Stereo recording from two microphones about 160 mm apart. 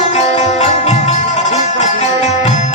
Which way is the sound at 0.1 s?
45° left (ahead or behind).